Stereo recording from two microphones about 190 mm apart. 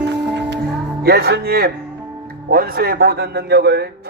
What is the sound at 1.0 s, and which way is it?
A man's voice, 55° right (ahead or behind).